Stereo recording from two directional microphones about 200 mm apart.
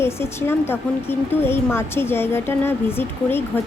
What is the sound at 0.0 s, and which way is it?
A woman's voice, 10° left (ahead or behind).